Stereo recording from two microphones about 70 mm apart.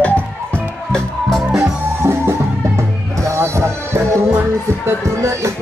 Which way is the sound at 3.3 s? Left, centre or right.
Right.